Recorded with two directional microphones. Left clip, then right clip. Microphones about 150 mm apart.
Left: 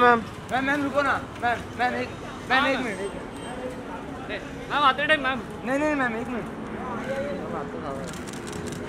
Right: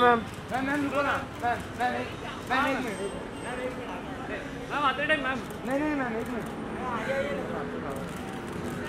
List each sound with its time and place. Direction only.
0.5 s a man's voice: 40° left (ahead or behind)
4.3 s a man's voice: 35° left (ahead or behind)